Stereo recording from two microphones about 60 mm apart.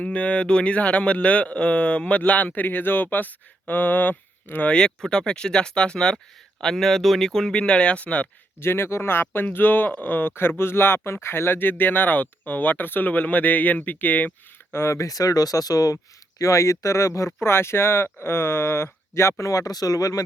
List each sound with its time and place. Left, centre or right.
0.0 s speech: left
5.0 s speech: centre
8.6 s speech: left
14.7 s speech: left
14.9 s speech: left
16.4 s speech: left
17.4 s speech: left